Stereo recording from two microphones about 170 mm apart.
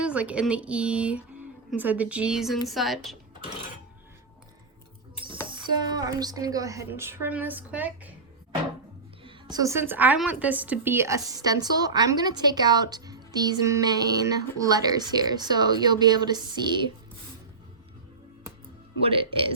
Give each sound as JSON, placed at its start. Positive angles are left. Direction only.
{"t": 0.0, "sound": "a woman's voice", "side_deg": -5}
{"t": 5.2, "sound": "a woman's voice", "side_deg": -30}
{"t": 9.2, "sound": "a woman's voice", "side_deg": -25}
{"t": 19.0, "sound": "speech", "side_deg": -30}